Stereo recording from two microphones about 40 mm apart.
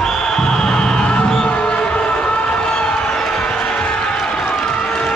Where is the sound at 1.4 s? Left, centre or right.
Left.